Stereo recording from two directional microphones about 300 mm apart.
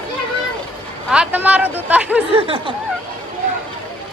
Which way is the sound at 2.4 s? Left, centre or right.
Centre.